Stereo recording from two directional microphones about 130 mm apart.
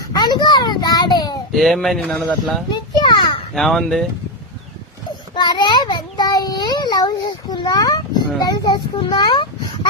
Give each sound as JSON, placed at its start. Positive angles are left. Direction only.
{"t": 0.1, "sound": "a child's voice", "side_deg": 35}
{"t": 1.5, "sound": "speech", "side_deg": 0}
{"t": 2.6, "sound": "children playing", "side_deg": 35}
{"t": 3.5, "sound": "speech", "side_deg": 0}
{"t": 5.3, "sound": "a child's voice", "side_deg": 30}